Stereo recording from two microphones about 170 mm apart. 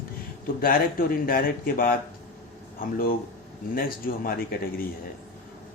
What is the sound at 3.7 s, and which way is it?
Speech, 60° left (ahead or behind).